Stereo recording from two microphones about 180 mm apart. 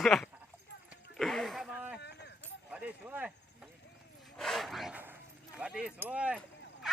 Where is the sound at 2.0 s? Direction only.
70° left (ahead or behind).